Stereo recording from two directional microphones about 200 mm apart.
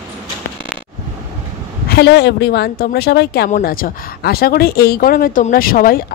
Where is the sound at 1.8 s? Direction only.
55° left (ahead or behind).